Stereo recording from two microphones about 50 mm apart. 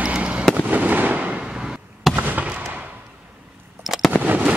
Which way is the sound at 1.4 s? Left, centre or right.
Centre.